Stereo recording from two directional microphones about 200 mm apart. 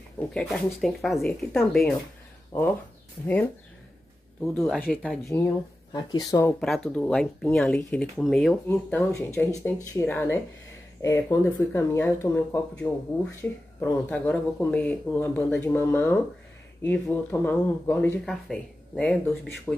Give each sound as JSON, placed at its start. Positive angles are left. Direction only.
{"t": 0.3, "sound": "speech", "side_deg": 0}
{"t": 4.6, "sound": "speech", "side_deg": 0}
{"t": 5.9, "sound": "speech", "side_deg": 20}
{"t": 6.6, "sound": "speech", "side_deg": 0}